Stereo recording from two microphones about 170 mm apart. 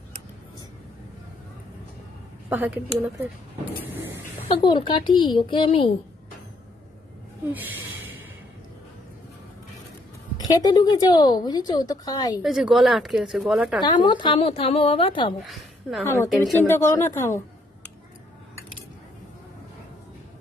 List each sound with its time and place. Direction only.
2.5 s speech: 10° right (ahead or behind)
4.5 s speech: 30° left (ahead or behind)
7.4 s speech: 10° right (ahead or behind)
10.5 s speech: 25° left (ahead or behind)
12.4 s a woman's voice: centre (ahead or behind)
13.7 s a woman's voice: 25° left (ahead or behind)
15.4 s a woman's voice: centre (ahead or behind)
16.0 s speech: 15° left (ahead or behind)